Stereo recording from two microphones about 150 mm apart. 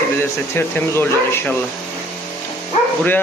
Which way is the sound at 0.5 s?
15° left (ahead or behind).